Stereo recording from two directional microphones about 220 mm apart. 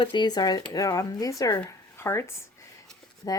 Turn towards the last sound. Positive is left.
turn(degrees=15)  # may be behind; listen again after turning